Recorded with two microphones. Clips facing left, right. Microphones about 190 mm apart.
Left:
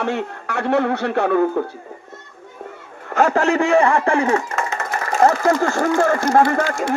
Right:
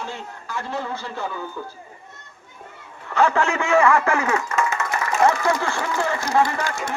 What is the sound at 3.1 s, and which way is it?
A man's voice, 45° left (ahead or behind).